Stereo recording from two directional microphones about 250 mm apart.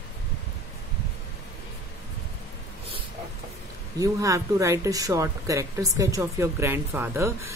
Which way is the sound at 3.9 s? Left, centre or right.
Centre.